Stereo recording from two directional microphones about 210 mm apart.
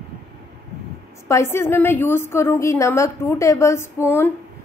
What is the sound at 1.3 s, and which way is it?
A woman's voice, 10° left (ahead or behind).